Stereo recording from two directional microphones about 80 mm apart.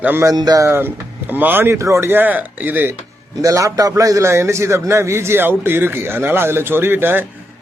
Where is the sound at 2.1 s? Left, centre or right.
Right.